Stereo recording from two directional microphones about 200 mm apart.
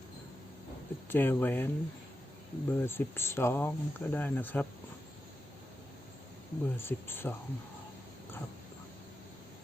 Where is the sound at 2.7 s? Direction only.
10° left (ahead or behind).